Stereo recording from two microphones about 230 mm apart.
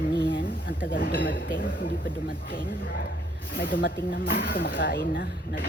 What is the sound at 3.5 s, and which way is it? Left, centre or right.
Speech, left.